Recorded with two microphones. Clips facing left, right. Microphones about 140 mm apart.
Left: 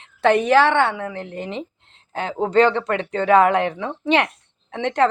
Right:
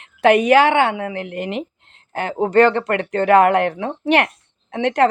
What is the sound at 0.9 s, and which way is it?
Speech, 65° right (ahead or behind).